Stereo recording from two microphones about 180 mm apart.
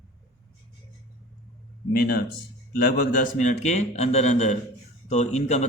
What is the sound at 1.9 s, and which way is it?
Speech, 55° left (ahead or behind).